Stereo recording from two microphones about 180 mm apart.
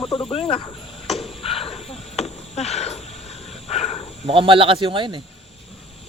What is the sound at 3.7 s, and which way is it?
Cricket, 35° left (ahead or behind).